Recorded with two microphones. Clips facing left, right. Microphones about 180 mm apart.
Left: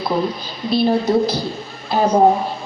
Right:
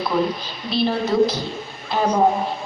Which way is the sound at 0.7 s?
40° left (ahead or behind).